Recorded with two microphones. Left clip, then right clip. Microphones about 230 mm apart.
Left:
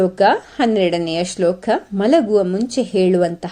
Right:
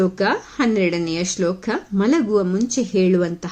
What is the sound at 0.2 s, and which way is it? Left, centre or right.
A woman's voice, centre.